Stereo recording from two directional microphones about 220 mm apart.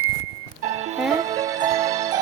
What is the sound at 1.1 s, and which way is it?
Music, 15° right (ahead or behind).